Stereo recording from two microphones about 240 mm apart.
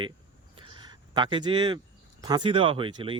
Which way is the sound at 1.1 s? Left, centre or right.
Centre.